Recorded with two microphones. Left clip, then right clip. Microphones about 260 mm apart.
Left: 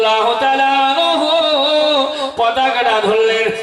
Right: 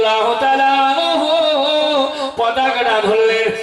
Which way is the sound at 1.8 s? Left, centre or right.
Right.